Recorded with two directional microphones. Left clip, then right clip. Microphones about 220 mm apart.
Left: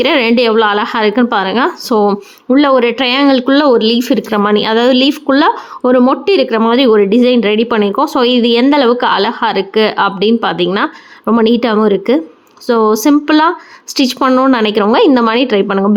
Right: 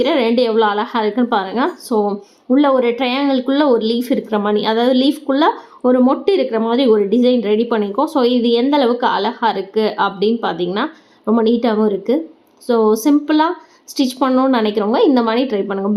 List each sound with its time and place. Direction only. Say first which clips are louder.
0.0 s speech: left 4 dB; 25° left (ahead or behind)